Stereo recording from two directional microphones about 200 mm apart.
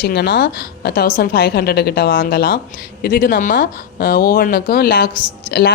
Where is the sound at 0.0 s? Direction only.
55° left (ahead or behind).